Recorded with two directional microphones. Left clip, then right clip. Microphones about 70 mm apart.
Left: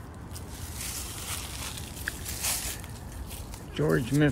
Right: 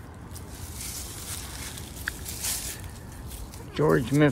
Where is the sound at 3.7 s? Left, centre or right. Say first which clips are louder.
Right 4 dB; right.